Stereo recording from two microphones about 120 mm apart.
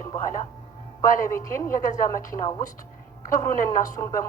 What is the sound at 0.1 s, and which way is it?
A woman's voice, 25° left (ahead or behind).